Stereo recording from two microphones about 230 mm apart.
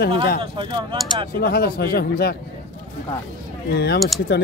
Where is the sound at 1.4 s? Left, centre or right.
Left.